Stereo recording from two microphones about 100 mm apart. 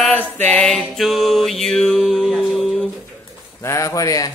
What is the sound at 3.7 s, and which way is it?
Speech, 35° left (ahead or behind).